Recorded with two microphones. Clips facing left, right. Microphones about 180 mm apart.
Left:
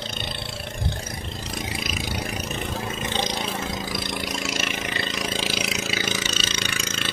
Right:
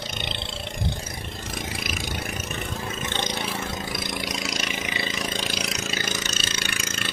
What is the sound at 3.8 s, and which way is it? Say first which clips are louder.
Vehicle: left 1 dB; centre (ahead or behind).